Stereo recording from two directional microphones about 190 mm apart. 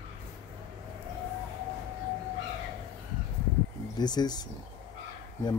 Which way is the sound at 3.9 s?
20° left (ahead or behind).